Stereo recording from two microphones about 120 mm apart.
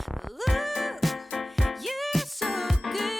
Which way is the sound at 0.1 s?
Centre (ahead or behind).